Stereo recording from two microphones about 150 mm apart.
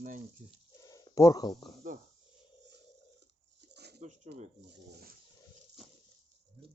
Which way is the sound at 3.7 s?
90° right.